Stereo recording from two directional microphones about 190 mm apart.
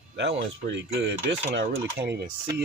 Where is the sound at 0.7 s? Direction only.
60° right (ahead or behind).